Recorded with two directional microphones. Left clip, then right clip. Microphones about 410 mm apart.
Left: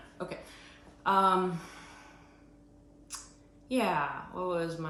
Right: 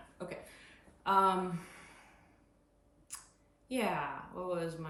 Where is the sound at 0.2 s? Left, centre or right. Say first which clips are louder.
Left 5 dB; centre.